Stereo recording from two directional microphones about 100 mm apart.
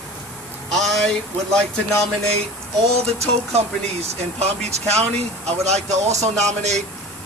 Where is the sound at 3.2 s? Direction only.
90° right.